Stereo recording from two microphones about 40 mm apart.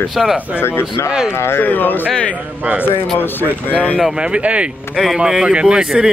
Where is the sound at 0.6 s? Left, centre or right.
Left.